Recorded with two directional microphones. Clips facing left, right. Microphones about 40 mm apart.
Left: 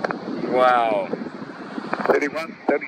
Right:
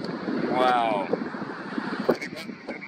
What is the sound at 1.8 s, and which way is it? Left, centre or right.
Vehicle, left.